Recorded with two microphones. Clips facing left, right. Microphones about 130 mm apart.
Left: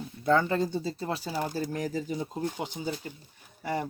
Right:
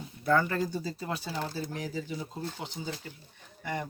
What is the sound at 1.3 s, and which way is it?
Speech, 15° left (ahead or behind).